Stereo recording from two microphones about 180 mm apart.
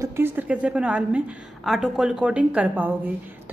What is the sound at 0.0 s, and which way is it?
A man's voice, 15° right (ahead or behind).